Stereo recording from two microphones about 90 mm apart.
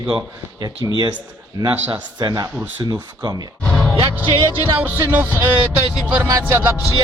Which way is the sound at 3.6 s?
10° left (ahead or behind).